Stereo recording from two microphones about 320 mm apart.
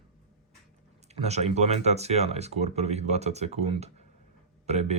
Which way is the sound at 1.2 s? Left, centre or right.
Centre.